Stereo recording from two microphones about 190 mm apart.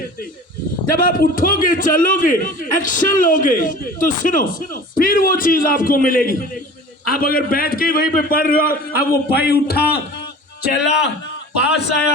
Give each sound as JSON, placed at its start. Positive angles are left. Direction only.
{"t": 0.9, "sound": "a man's voice", "side_deg": 50}